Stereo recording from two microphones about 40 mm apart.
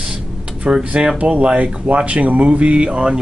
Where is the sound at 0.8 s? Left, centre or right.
Right.